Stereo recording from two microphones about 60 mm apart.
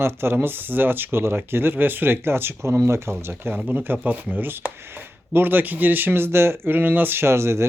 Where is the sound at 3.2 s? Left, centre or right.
Right.